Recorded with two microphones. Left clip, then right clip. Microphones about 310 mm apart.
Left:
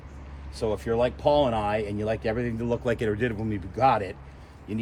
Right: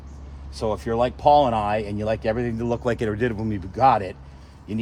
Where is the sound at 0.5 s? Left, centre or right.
Centre.